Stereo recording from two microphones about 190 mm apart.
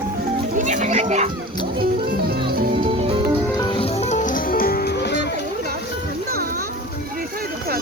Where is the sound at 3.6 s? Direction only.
25° left (ahead or behind); by 5.3 s 60° left (ahead or behind).